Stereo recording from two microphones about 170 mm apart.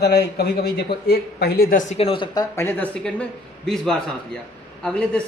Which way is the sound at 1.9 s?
35° left (ahead or behind).